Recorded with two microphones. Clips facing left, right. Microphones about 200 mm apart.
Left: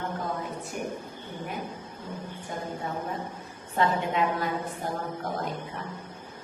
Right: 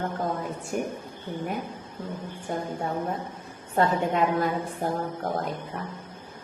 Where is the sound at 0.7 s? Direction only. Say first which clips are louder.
Right 6 dB; 40° right (ahead or behind).